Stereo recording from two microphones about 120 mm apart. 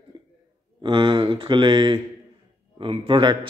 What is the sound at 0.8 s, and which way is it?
Mantra, 40° right (ahead or behind).